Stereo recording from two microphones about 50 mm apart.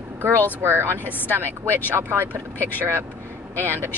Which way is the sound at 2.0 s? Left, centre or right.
Right.